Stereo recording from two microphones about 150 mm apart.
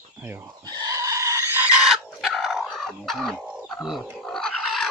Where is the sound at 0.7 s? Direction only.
25° right (ahead or behind).